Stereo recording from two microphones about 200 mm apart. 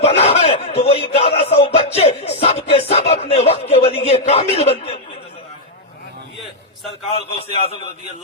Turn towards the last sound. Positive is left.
turn(degrees=30)  # may be behind; listen again after turning